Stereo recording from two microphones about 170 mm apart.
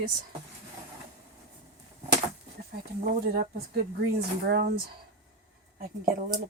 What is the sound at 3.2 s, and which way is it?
Speech, 65° right (ahead or behind).